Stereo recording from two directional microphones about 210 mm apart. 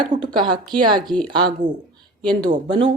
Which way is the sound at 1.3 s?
20° right (ahead or behind).